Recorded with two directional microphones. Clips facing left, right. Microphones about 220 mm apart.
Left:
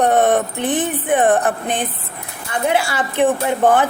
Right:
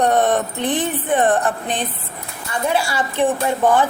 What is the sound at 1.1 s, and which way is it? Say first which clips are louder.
Speech: left 2 dB; 15° left (ahead or behind).